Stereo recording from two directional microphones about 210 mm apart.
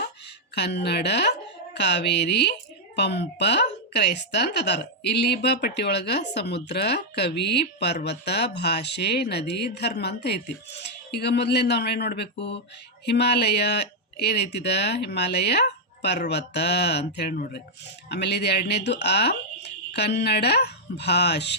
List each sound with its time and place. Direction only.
0.5 s speech: 55° left (ahead or behind)